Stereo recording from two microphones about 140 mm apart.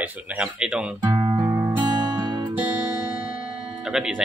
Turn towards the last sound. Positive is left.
turn(degrees=-5)  # may be behind; listen again after turning